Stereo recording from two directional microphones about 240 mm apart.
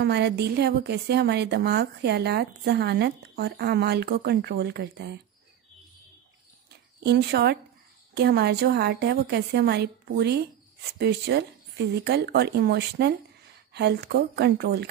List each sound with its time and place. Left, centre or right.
0.0 s speech: right
7.0 s speech: right